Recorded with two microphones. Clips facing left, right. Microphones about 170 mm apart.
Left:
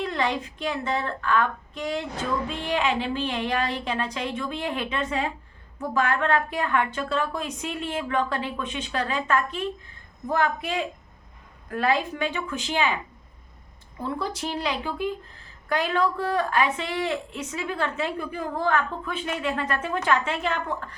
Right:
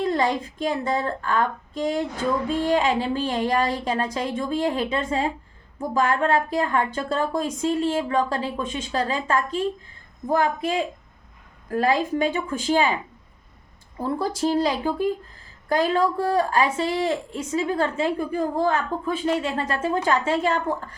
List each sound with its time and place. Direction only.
0.0 s a woman's voice: 40° right (ahead or behind)
14.0 s a woman's voice: 40° right (ahead or behind)